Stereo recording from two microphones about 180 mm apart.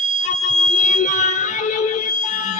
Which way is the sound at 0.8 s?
45° left (ahead or behind).